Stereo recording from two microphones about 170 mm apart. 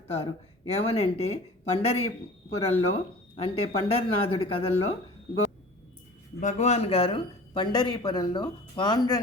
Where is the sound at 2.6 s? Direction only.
35° left (ahead or behind).